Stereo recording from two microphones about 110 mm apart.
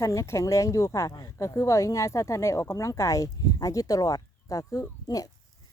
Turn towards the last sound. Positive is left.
turn(degrees=30)  # may be behind; listen again after turning